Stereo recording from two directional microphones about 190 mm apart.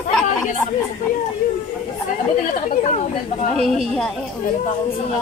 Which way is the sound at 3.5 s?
Centre (ahead or behind).